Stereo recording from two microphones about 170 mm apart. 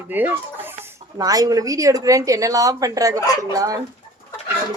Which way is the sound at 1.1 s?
20° right (ahead or behind).